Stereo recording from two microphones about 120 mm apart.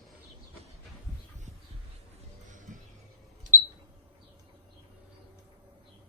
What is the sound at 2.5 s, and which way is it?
Music, 90° right.